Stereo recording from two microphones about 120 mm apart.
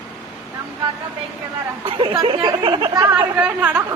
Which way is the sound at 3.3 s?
10° right (ahead or behind).